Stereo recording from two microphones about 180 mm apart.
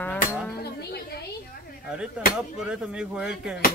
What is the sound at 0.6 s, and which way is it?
Speech, 60° left (ahead or behind).